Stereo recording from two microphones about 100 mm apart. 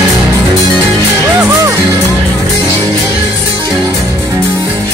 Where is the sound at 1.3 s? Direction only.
25° right (ahead or behind).